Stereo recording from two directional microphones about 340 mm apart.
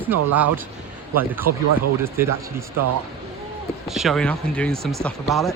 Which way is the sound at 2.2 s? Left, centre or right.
Centre.